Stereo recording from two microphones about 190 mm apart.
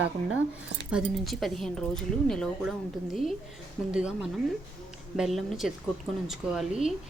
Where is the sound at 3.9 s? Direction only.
5° right (ahead or behind).